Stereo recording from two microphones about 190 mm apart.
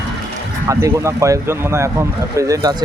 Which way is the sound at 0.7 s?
15° right (ahead or behind).